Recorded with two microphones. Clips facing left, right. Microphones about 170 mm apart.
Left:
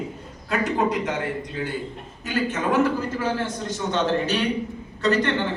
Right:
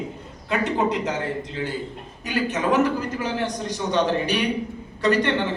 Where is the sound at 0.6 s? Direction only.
25° right (ahead or behind).